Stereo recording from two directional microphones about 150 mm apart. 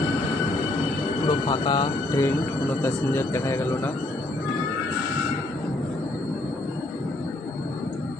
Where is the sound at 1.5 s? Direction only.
30° left (ahead or behind).